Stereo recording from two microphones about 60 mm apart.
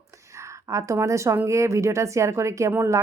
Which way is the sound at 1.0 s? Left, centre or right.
Right.